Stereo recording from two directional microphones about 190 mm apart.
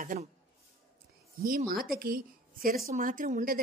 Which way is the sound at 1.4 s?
50° right (ahead or behind).